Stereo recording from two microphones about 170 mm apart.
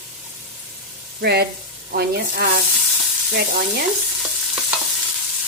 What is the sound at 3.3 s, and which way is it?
Stir, 65° right (ahead or behind).